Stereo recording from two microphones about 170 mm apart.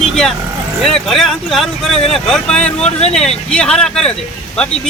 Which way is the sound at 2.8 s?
35° left (ahead or behind).